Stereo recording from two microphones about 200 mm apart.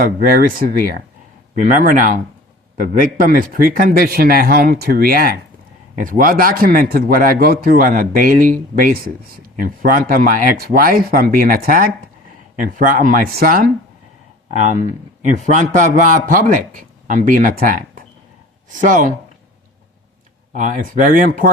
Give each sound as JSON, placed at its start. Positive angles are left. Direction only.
{"t": 0.0, "sound": "a man's voice", "side_deg": -45}
{"t": 15.2, "sound": "a man's voice", "side_deg": -40}
{"t": 20.5, "sound": "a man's voice", "side_deg": -40}